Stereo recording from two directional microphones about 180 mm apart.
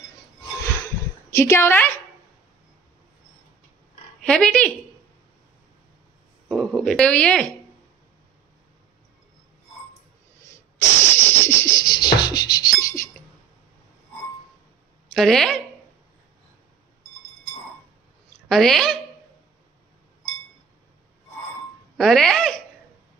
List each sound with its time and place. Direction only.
1.3 s a woman's voice: 15° left (ahead or behind)
4.3 s speech: 5° left (ahead or behind)
6.5 s speech: centre (ahead or behind)
11.1 s music: 15° left (ahead or behind)
15.1 s speech: centre (ahead or behind)
18.5 s speech: centre (ahead or behind)
21.9 s speech: centre (ahead or behind)